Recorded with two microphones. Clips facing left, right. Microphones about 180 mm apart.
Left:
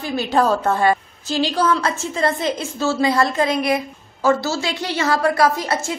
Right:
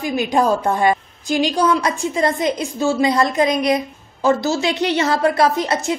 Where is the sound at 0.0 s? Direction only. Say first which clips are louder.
Right 1 dB; 15° right (ahead or behind).